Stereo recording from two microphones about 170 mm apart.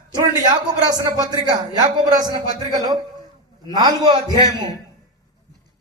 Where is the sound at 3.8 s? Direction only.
20° right (ahead or behind).